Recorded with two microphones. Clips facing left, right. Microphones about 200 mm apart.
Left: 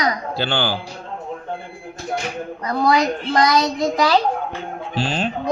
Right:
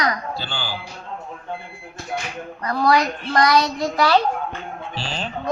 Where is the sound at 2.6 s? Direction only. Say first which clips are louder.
Left 1 dB; 25° left (ahead or behind).